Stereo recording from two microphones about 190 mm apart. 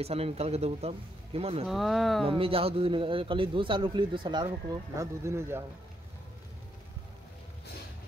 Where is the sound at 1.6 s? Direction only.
Centre (ahead or behind).